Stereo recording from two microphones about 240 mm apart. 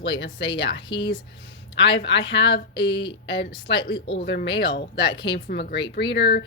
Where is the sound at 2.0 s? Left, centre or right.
Left.